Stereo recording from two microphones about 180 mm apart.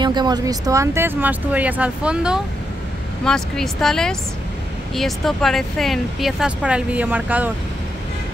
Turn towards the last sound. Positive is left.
turn(degrees=-10)  # may be behind; listen again after turning